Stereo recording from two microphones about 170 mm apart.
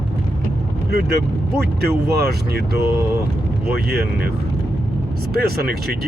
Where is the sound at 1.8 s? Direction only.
70° right (ahead or behind).